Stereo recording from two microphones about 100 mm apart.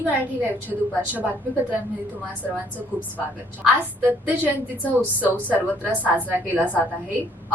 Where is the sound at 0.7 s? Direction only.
15° right (ahead or behind).